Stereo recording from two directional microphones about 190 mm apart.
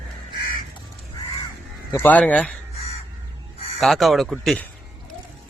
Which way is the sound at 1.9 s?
10° left (ahead or behind).